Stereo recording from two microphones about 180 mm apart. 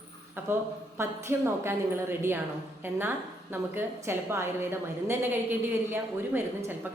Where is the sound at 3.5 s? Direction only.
15° right (ahead or behind).